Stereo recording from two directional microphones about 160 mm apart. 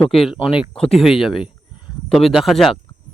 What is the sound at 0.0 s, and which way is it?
Speech, centre (ahead or behind).